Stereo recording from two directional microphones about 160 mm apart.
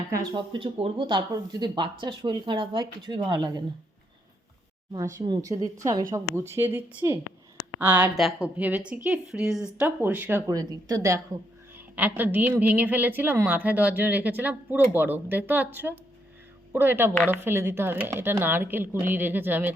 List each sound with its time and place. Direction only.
0.1 s speech: 25° right (ahead or behind)
5.1 s a woman's voice: 25° right (ahead or behind)
8.1 s a woman's voice: centre (ahead or behind)